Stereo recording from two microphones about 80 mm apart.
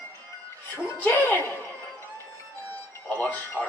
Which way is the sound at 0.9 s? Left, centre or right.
Left.